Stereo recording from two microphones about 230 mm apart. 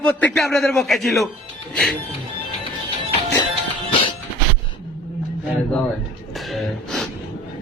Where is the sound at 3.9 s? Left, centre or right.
Left.